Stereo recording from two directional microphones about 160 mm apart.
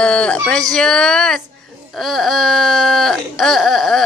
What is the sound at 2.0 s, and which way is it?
Whimper, centre (ahead or behind).